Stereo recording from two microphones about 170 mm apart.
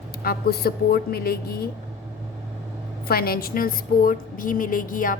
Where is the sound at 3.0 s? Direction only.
65° left (ahead or behind).